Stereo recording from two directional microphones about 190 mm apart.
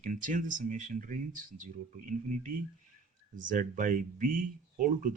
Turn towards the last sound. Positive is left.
turn(degrees=-45)  # may be behind; listen again after turning